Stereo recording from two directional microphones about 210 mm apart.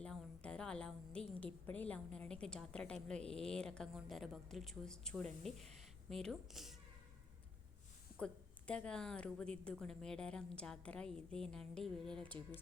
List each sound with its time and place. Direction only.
0.0 s a sound: 5° left (ahead or behind)
1.6 s a woman's voice: 5° left (ahead or behind)
8.2 s a woman's voice: 5° left (ahead or behind)